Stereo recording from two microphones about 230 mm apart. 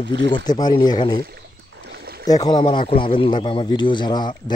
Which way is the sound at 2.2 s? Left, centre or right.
Centre.